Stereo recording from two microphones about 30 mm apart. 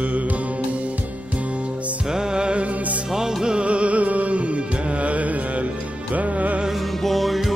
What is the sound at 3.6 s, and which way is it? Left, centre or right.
Music, right.